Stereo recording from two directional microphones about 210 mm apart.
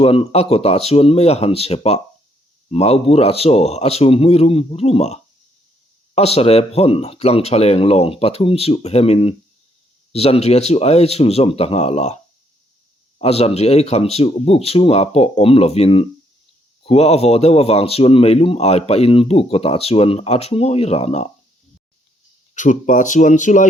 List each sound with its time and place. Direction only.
0.0 s speech: 25° left (ahead or behind)
22.5 s speech: 35° left (ahead or behind)